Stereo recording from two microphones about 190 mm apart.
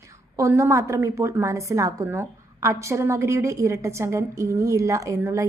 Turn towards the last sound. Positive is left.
turn(degrees=-15)  # may be behind; listen again after turning